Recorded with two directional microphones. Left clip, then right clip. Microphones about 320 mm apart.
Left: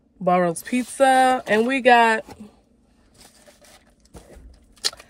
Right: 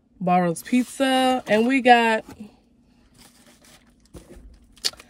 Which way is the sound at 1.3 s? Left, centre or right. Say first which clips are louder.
Left 1 dB; left.